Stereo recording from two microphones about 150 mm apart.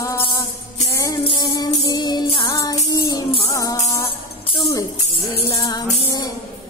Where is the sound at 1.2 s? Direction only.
25° left (ahead or behind).